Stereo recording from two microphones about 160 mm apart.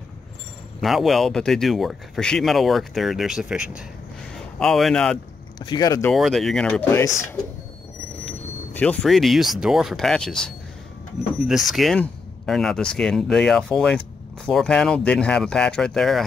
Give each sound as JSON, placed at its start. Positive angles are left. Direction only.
{"t": 0.7, "sound": "speech", "side_deg": 0}
{"t": 5.6, "sound": "speech", "side_deg": 25}
{"t": 6.1, "sound": "speech", "side_deg": 0}
{"t": 8.3, "sound": "speech", "side_deg": 5}